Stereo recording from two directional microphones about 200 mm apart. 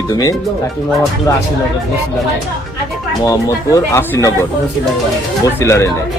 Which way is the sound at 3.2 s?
15° left (ahead or behind).